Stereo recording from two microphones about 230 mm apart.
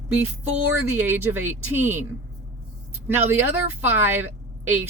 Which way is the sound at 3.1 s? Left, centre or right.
Centre.